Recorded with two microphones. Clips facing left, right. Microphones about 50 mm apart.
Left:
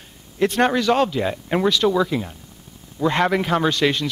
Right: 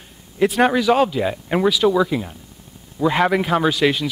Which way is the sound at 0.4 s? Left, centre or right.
Centre.